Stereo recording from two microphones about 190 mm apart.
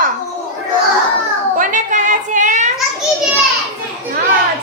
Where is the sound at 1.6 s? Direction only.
40° right (ahead or behind).